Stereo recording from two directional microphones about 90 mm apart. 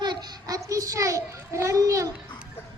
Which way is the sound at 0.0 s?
45° right (ahead or behind).